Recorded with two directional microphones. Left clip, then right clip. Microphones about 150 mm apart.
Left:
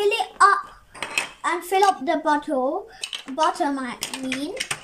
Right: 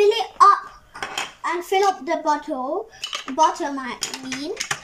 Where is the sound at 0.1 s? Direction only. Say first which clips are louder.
Right 3 dB; 25° left (ahead or behind).